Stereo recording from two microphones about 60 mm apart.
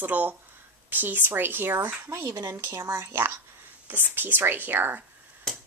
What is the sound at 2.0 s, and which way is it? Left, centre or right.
Speech, right.